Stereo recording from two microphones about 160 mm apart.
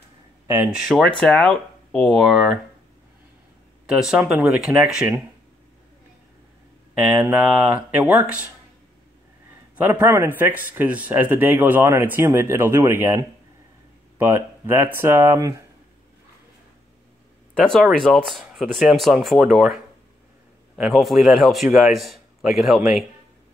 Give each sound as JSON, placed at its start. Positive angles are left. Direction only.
{"t": 0.5, "sound": "a man's voice", "side_deg": -10}
{"t": 3.8, "sound": "a man's voice", "side_deg": -5}
{"t": 7.0, "sound": "a man's voice", "side_deg": -10}
{"t": 9.8, "sound": "a man's voice", "side_deg": -10}
{"t": 17.6, "sound": "a man's voice", "side_deg": 5}